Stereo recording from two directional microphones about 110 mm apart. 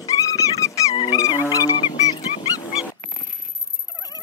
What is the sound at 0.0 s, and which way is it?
Dog, 30° left (ahead or behind).